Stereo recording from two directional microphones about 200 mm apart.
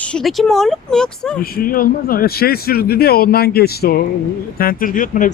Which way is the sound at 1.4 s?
45° left (ahead or behind).